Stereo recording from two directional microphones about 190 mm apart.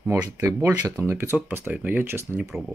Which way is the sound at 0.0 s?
15° right (ahead or behind).